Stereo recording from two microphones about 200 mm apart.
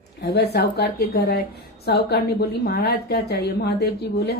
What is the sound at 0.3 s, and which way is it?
A woman's voice, 55° left (ahead or behind).